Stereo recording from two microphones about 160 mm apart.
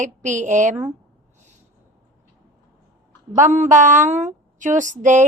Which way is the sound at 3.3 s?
50° right (ahead or behind).